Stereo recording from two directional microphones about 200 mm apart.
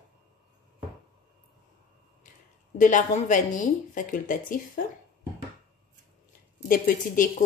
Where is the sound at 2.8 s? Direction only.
40° left (ahead or behind).